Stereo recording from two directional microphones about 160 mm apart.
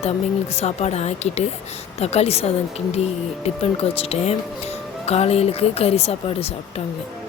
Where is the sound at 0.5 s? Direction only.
40° left (ahead or behind).